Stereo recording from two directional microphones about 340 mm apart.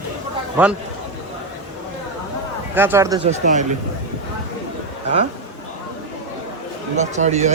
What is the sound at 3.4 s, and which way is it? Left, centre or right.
Speech, right.